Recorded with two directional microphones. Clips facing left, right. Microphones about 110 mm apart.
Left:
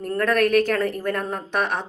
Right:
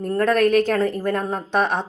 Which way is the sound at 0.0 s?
25° right (ahead or behind).